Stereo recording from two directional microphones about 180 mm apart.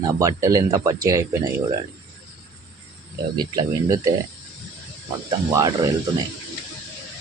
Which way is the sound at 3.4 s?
20° right (ahead or behind).